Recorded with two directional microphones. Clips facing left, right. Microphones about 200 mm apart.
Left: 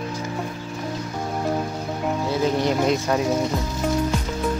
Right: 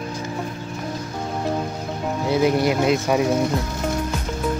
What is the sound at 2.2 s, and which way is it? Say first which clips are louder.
Speech: right 4 dB; 15° right (ahead or behind).